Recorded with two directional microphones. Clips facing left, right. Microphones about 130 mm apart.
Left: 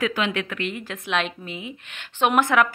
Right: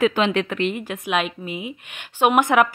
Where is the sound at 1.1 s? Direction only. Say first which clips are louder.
Right 2 dB; 10° right (ahead or behind).